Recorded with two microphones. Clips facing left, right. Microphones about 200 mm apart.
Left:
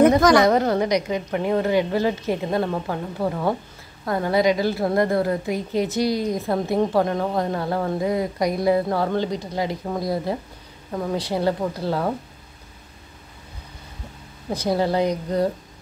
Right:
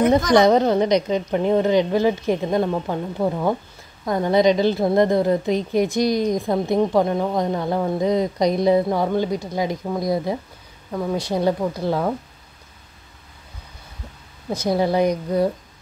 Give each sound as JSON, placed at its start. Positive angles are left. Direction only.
{"t": 0.3, "sound": "a woman's voice", "side_deg": -20}
{"t": 14.5, "sound": "speech", "side_deg": 10}
{"t": 14.8, "sound": "a woman's voice", "side_deg": -15}